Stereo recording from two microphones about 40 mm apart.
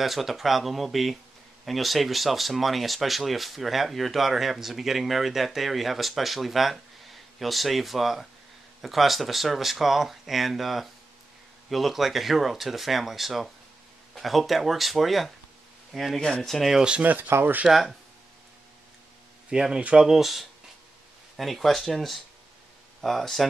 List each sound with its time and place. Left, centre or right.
0.0 s speech: centre
16.2 s speech: centre
16.4 s speech: centre
17.0 s speech: right
17.6 s speech: centre
19.5 s speech: centre